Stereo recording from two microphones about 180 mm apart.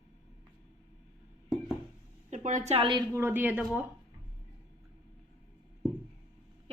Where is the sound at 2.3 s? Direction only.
45° right (ahead or behind).